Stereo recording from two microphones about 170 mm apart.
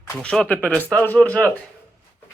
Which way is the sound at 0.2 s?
5° left (ahead or behind).